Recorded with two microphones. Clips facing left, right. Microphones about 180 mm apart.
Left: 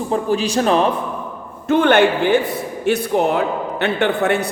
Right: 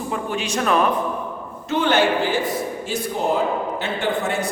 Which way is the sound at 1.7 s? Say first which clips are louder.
Left 5 dB; 55° left (ahead or behind).